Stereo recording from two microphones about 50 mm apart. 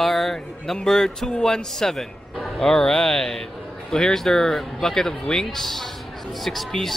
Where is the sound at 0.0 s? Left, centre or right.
Centre.